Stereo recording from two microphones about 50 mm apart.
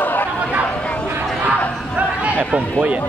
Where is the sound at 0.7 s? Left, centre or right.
Left.